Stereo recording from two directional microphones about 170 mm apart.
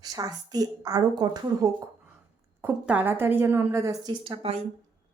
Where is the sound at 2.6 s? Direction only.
10° right (ahead or behind).